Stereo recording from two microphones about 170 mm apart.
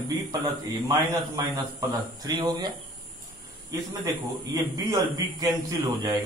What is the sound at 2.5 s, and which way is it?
Speech, 25° right (ahead or behind).